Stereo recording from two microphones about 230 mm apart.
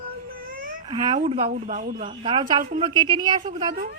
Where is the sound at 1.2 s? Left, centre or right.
Right.